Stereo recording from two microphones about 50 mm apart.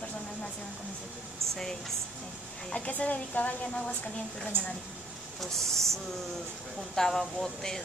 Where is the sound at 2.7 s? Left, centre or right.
Left.